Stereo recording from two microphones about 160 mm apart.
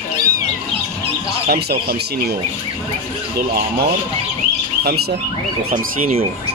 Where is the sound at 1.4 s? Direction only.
80° right.